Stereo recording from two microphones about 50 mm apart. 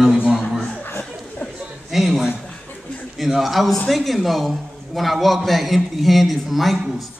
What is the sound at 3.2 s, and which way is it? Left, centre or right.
A man's voice, centre.